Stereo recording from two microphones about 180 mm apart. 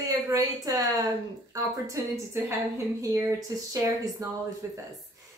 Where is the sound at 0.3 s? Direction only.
20° right (ahead or behind).